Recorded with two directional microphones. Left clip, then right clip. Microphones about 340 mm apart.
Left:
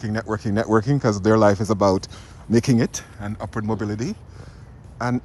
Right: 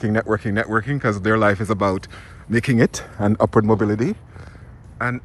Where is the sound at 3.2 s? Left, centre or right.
Centre.